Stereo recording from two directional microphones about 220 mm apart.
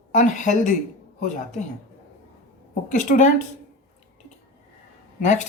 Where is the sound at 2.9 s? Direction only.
35° left (ahead or behind).